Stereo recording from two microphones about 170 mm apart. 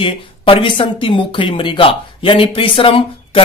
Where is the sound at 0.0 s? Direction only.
30° left (ahead or behind).